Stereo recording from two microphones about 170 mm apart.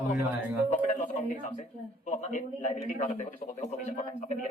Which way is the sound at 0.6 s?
40° left (ahead or behind).